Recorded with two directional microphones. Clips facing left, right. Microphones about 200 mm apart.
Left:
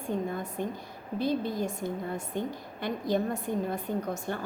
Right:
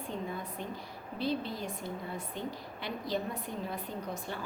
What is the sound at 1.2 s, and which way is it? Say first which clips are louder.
Speech: left 5 dB; 45° left (ahead or behind).